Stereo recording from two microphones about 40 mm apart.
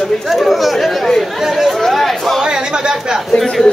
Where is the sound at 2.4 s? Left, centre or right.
Centre.